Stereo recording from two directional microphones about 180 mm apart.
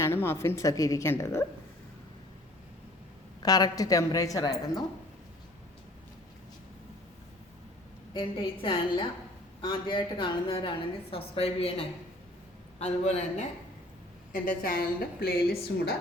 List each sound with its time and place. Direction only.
0.0 s a woman's voice: 15° left (ahead or behind)
3.4 s a woman's voice: 20° left (ahead or behind)
8.1 s a woman's voice: 25° left (ahead or behind)
14.3 s a woman's voice: 50° left (ahead or behind)